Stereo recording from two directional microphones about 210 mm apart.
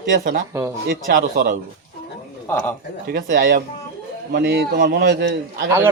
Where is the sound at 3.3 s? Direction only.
40° right (ahead or behind).